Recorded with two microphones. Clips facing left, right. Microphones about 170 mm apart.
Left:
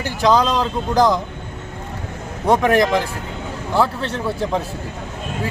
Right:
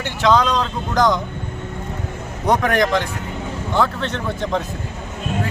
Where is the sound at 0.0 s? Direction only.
35° left (ahead or behind).